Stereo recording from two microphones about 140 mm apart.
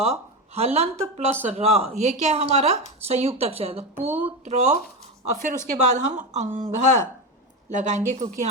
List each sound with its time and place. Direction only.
0.0 s a woman's voice: 45° right (ahead or behind)